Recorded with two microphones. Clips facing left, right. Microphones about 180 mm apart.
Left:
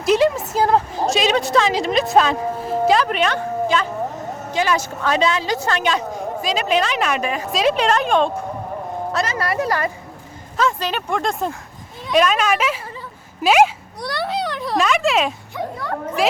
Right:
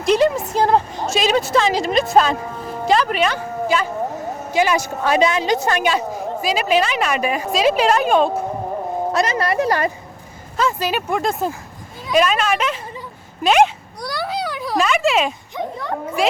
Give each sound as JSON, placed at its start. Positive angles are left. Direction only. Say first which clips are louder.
{"t": 0.0, "sound": "a woman's voice", "louder": "even", "side_deg": 0}
{"t": 9.1, "sound": "a woman's voice", "louder": "right 2 dB", "side_deg": -15}
{"t": 10.6, "sound": "a woman's voice", "louder": "right 1 dB", "side_deg": -5}
{"t": 13.4, "sound": "a sound", "louder": "even", "side_deg": 5}
{"t": 15.5, "sound": "a woman's voice", "louder": "right 1 dB", "side_deg": -20}